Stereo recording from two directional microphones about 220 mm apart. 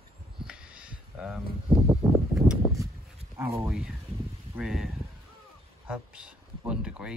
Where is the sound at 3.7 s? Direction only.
5° right (ahead or behind).